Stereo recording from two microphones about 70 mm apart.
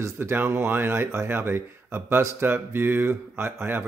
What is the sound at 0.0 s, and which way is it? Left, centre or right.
Speech, right.